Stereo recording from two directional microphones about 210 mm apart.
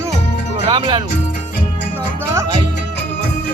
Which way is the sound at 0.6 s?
20° right (ahead or behind).